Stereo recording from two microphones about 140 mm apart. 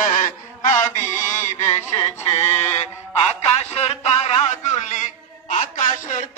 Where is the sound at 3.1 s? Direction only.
50° left (ahead or behind).